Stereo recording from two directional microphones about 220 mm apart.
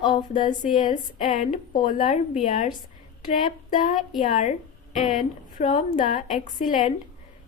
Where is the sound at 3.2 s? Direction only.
40° left (ahead or behind).